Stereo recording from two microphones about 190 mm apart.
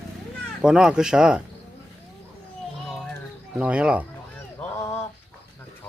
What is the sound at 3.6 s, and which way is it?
Speech, 5° right (ahead or behind).